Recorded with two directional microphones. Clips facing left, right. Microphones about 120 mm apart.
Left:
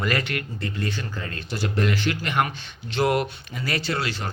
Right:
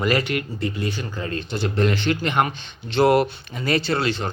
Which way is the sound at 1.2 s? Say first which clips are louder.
Right 6 dB; 25° right (ahead or behind).